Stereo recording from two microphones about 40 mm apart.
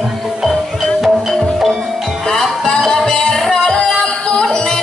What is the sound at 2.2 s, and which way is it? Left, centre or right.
Music, centre.